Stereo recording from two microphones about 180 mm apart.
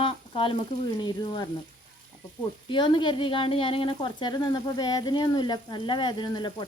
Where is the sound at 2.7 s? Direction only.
25° left (ahead or behind).